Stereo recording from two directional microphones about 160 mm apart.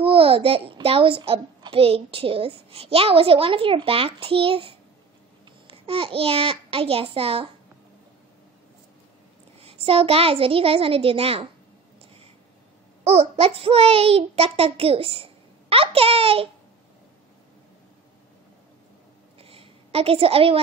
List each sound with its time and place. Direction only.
0.0 s a child's voice: 35° right (ahead or behind)
9.6 s a child's voice: 40° right (ahead or behind)
13.0 s a child's voice: 40° right (ahead or behind)
19.4 s a sound: 35° right (ahead or behind)